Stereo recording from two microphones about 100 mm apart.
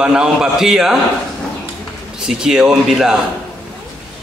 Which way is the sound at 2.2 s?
5° right (ahead or behind).